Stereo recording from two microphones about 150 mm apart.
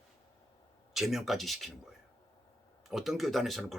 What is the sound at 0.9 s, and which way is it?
Speech, centre (ahead or behind).